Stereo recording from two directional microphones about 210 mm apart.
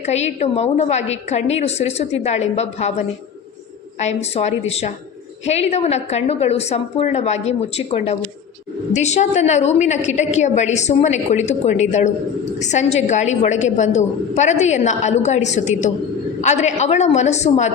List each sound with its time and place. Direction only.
0.0 s a woman's voice: 30° left (ahead or behind)
4.0 s a woman's voice: 30° left (ahead or behind)